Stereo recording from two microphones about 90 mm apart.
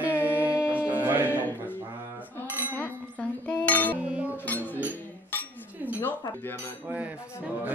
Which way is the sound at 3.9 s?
15° right (ahead or behind).